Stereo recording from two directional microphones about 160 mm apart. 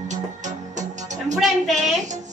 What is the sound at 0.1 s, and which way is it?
Music, 50° right (ahead or behind).